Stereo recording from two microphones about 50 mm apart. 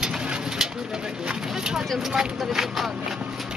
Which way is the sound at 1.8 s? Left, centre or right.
Centre.